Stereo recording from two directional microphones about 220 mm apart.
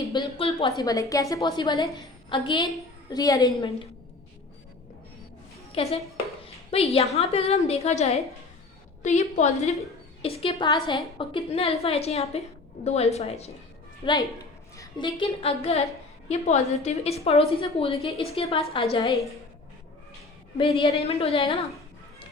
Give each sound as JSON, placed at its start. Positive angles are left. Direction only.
{"t": 0.1, "sound": "a sound", "side_deg": 20}
{"t": 0.8, "sound": "a woman's voice", "side_deg": 15}
{"t": 5.7, "sound": "a woman's voice", "side_deg": 30}
{"t": 6.4, "sound": "a sound", "side_deg": 25}
{"t": 6.9, "sound": "a woman's voice", "side_deg": 30}
{"t": 16.8, "sound": "a woman's voice", "side_deg": 30}
{"t": 20.6, "sound": "a woman's voice", "side_deg": 20}